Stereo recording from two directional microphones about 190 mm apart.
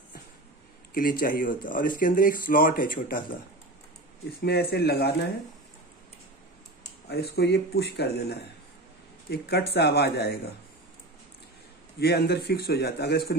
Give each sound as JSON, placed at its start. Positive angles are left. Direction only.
{"t": 1.2, "sound": "speech", "side_deg": 45}
{"t": 4.4, "sound": "a man's voice", "side_deg": 55}
{"t": 7.1, "sound": "a man's voice", "side_deg": 60}
{"t": 12.0, "sound": "a man's voice", "side_deg": 60}